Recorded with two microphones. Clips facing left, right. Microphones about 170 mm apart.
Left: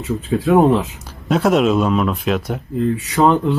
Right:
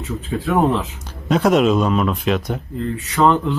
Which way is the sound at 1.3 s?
Centre (ahead or behind).